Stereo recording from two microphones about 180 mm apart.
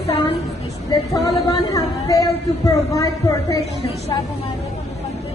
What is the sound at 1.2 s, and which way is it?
Speech, 20° left (ahead or behind).